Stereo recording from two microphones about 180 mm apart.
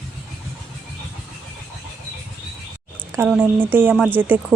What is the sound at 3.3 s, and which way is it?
Speech, 10° right (ahead or behind).